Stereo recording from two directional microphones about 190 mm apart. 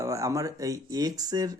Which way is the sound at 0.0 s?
15° right (ahead or behind).